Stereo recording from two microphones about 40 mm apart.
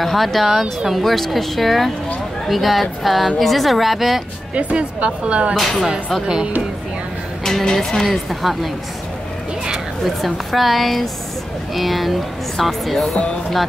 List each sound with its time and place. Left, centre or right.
0.0 s speech: centre
4.6 s speech: right
5.6 s speech: centre
7.6 s a woman's voice: centre
8.0 s speech: centre
10.0 s speech: centre